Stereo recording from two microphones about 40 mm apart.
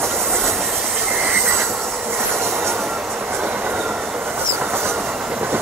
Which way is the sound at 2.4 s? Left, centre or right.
Right.